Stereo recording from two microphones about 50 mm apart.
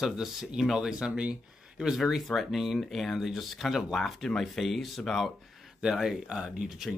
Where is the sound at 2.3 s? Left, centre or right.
Centre.